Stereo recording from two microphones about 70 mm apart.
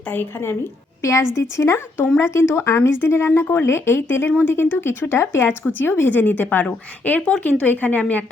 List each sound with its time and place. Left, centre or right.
0.0 s speech: left
1.0 s a woman's voice: left